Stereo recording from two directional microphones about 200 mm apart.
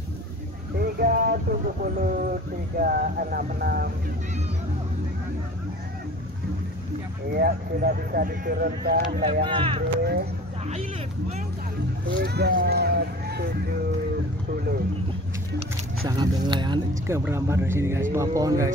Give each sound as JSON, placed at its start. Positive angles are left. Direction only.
{"t": 0.7, "sound": "speech", "side_deg": -50}
{"t": 7.3, "sound": "speech", "side_deg": -50}
{"t": 9.2, "sound": "speech", "side_deg": -25}
{"t": 12.1, "sound": "speech", "side_deg": -55}
{"t": 16.1, "sound": "speech", "side_deg": -20}
{"t": 17.2, "sound": "speech", "side_deg": -10}